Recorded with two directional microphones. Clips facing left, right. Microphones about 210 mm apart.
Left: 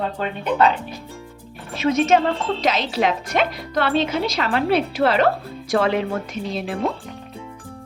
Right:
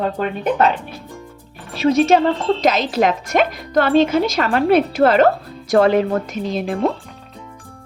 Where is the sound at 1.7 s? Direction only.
35° right (ahead or behind).